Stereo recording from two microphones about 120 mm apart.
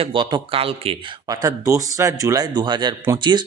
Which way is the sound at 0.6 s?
55° right (ahead or behind).